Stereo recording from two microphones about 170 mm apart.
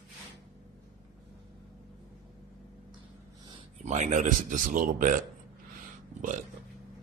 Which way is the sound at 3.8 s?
45° right (ahead or behind).